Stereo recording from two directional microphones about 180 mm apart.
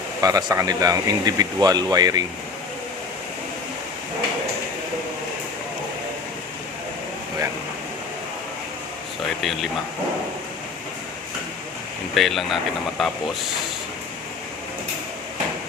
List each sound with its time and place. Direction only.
0.2 s speech: 20° right (ahead or behind)
9.4 s speech: centre (ahead or behind)
12.1 s speech: centre (ahead or behind)